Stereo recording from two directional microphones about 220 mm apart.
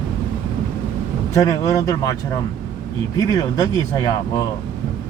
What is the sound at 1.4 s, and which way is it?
Speech, 15° left (ahead or behind).